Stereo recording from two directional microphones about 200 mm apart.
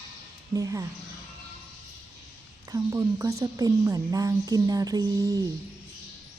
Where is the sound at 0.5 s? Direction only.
15° right (ahead or behind).